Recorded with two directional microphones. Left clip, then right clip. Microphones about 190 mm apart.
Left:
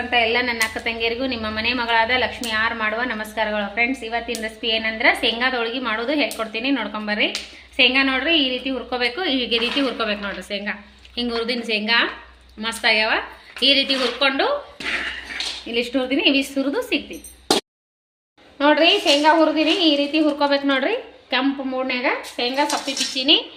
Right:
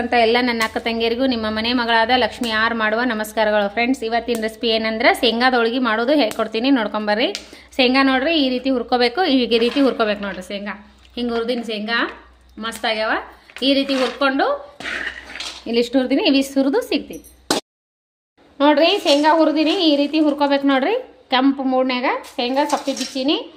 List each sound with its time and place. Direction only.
0.1 s a woman's voice: 70° right (ahead or behind)
15.6 s a woman's voice: 75° right (ahead or behind)
18.5 s a woman's voice: 65° right (ahead or behind)